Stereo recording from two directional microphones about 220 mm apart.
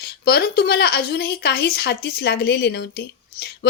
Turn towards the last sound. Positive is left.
turn(degrees=45)  # may be behind; listen again after turning